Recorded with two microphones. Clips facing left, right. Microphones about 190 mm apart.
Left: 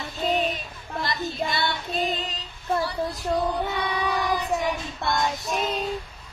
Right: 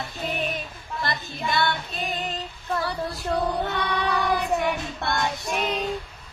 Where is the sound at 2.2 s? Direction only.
55° right (ahead or behind).